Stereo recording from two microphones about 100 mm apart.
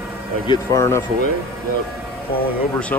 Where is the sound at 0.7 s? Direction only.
30° left (ahead or behind).